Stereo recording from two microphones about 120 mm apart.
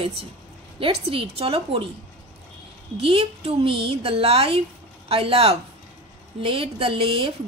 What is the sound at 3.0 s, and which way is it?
A woman's voice, 50° right (ahead or behind).